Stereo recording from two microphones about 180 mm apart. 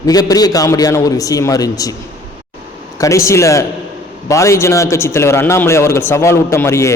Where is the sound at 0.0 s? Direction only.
20° left (ahead or behind).